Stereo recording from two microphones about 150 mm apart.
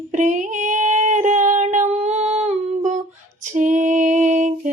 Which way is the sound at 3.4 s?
55° right (ahead or behind).